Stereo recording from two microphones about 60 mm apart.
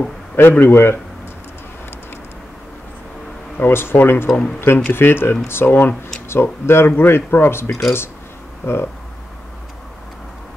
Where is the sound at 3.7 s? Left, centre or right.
Left.